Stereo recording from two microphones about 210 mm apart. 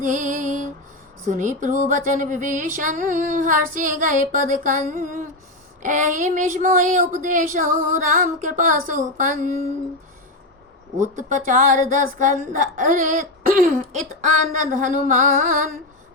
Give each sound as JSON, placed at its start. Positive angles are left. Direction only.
{"t": 0.0, "sound": "music", "side_deg": -40}
{"t": 1.3, "sound": "speech", "side_deg": -35}
{"t": 11.0, "sound": "speech", "side_deg": -35}